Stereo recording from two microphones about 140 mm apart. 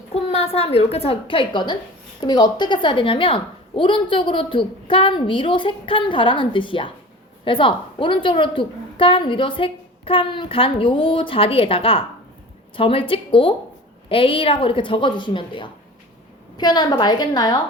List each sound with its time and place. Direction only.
0.1 s a woman's voice: 45° left (ahead or behind); by 17.6 s 30° left (ahead or behind)